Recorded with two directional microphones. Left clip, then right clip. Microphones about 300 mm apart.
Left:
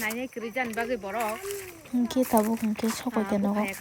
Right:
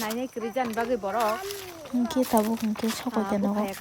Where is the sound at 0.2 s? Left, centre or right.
Centre.